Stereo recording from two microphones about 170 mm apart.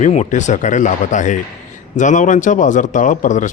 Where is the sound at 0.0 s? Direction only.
45° left (ahead or behind).